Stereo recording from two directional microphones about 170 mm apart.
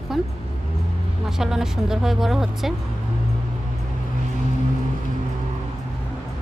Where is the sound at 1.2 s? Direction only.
5° right (ahead or behind).